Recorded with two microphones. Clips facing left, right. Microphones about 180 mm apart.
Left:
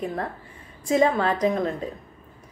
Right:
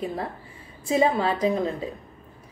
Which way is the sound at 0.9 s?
5° right (ahead or behind).